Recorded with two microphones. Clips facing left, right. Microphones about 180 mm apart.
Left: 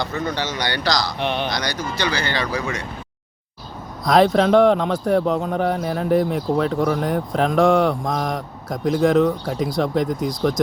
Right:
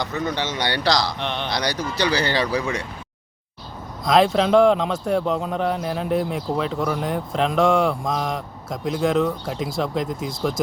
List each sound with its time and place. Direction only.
0.0 s speech: 20° right (ahead or behind)
1.2 s speech: 10° left (ahead or behind)
1.5 s speech: 30° right (ahead or behind)
4.0 s speech: centre (ahead or behind)